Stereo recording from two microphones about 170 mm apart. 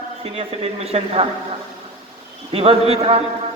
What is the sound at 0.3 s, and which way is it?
Speech, 35° right (ahead or behind).